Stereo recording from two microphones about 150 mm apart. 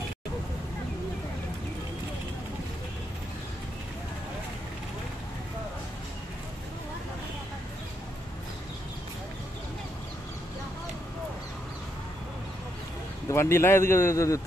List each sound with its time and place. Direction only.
13.3 s a man's voice: 15° left (ahead or behind)